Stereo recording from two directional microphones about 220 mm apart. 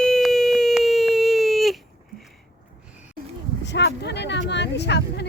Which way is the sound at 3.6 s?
50° left (ahead or behind).